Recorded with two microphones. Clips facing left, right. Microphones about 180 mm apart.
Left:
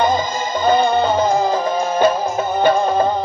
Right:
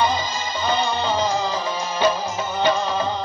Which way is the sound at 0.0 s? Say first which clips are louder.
Left 5 dB; 50° left (ahead or behind).